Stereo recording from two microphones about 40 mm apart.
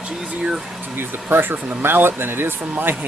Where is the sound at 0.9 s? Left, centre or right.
Right.